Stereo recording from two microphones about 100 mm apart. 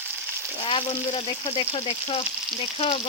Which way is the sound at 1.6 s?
80° left.